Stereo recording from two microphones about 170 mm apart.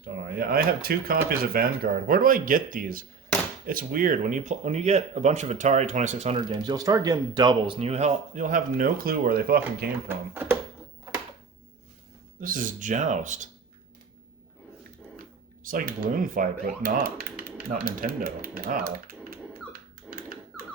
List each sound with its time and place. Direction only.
0.0 s speech: 65° right (ahead or behind); by 6.3 s 40° right (ahead or behind)
6.3 s speech: 25° right (ahead or behind); by 9.9 s 65° right (ahead or behind)
10.1 s speech: 15° right (ahead or behind)
12.4 s speech: 50° right (ahead or behind)
15.6 s speech: 55° right (ahead or behind)